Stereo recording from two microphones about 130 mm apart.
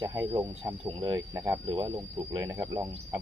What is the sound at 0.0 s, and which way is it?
Speech, 30° right (ahead or behind).